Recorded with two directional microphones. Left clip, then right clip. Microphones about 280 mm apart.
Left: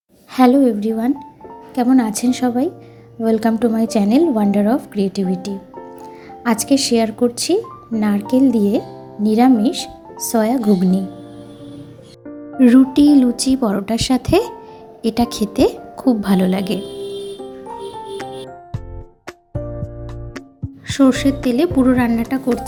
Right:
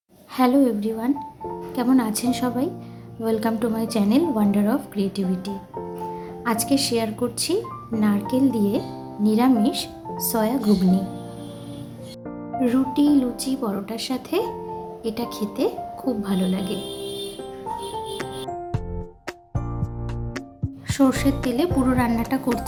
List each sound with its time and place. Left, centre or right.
0.3 s speech: centre
12.5 s speech: left
20.8 s a woman's voice: centre